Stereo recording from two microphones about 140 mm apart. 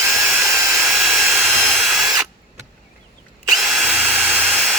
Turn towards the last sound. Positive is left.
turn(degrees=0)  # may be behind; listen again after turning